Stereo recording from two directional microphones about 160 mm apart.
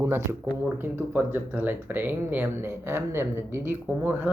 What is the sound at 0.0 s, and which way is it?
Speech, 15° right (ahead or behind).